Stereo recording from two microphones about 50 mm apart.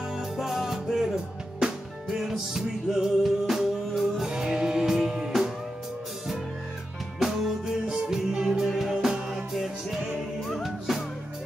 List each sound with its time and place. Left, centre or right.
0.2 s music: centre
4.3 s music: centre
7.2 s music: centre